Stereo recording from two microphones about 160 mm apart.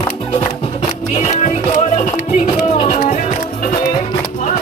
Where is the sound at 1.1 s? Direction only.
45° left (ahead or behind).